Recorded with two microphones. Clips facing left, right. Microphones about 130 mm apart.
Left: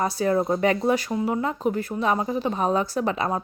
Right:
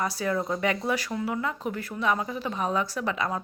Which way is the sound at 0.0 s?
30° left (ahead or behind).